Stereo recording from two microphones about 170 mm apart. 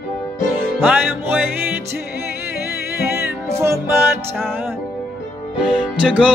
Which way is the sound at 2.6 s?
15° right (ahead or behind).